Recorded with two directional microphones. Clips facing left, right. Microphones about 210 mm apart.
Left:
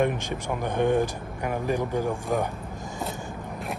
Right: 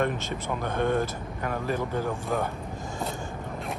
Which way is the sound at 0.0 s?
15° left (ahead or behind).